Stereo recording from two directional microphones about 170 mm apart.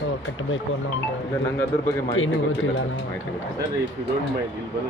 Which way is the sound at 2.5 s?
90° left.